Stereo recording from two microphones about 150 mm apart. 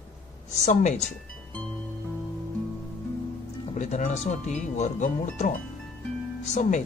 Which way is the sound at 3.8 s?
50° left (ahead or behind).